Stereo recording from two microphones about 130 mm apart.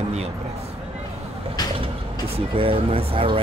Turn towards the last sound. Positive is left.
turn(degrees=-45)  # may be behind; listen again after turning